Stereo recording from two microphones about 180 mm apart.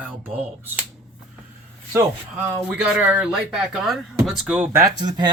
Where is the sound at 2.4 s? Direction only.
10° right (ahead or behind).